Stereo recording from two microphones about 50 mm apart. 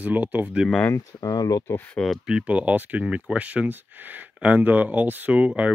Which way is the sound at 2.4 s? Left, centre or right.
Right.